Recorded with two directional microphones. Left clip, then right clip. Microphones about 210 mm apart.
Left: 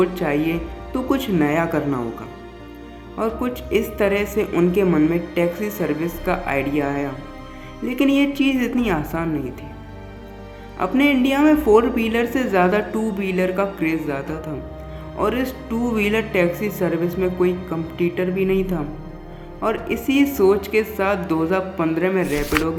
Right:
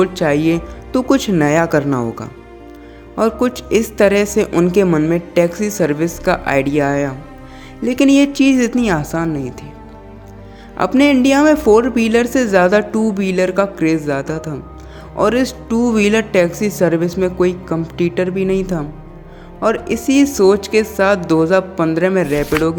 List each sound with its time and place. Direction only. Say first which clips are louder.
0.0 s a woman's voice: right 5 dB; 45° right (ahead or behind)
10.8 s a woman's voice: right 5 dB; 45° right (ahead or behind)
22.3 s speech: right 5 dB; centre (ahead or behind)